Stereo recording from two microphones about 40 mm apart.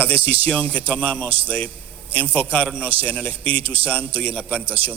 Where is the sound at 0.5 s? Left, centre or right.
Left.